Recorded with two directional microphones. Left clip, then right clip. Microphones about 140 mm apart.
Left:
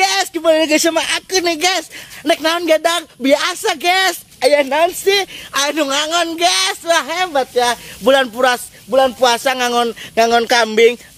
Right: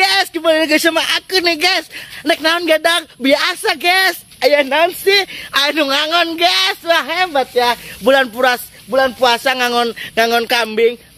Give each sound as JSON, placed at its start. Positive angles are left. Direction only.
{"t": 0.0, "sound": "speech", "side_deg": 5}
{"t": 4.5, "sound": "speech", "side_deg": -5}
{"t": 8.0, "sound": "speech", "side_deg": -5}
{"t": 10.1, "sound": "speech", "side_deg": 25}
{"t": 10.4, "sound": "speech", "side_deg": 40}